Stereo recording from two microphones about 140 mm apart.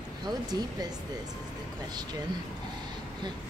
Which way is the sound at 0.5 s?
30° right (ahead or behind).